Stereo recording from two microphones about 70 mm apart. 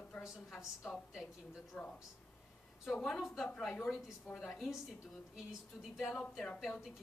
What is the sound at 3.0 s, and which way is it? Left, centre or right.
A woman's voice, centre.